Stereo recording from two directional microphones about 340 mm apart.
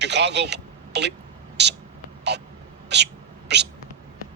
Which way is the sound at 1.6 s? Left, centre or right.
Right.